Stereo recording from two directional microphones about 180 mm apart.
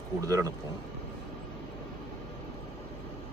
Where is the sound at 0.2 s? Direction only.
20° right (ahead or behind).